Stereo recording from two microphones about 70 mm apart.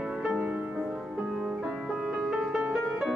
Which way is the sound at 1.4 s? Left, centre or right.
Centre.